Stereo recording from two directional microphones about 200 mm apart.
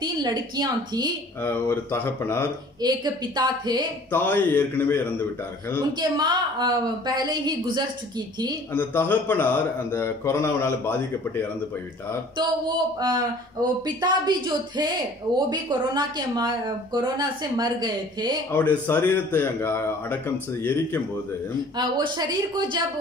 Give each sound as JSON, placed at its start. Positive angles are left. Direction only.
{"t": 0.0, "sound": "speech", "side_deg": -20}
{"t": 1.4, "sound": "a man's voice", "side_deg": 10}
{"t": 2.8, "sound": "speech", "side_deg": -20}
{"t": 4.1, "sound": "a man's voice", "side_deg": 10}
{"t": 5.9, "sound": "speech", "side_deg": -20}
{"t": 8.7, "sound": "a man's voice", "side_deg": 10}
{"t": 12.4, "sound": "speech", "side_deg": -20}
{"t": 18.5, "sound": "a man's voice", "side_deg": 10}
{"t": 21.7, "sound": "speech", "side_deg": -20}